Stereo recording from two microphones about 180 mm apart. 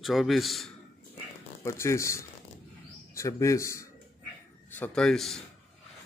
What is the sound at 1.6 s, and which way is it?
A man's voice, 15° left (ahead or behind).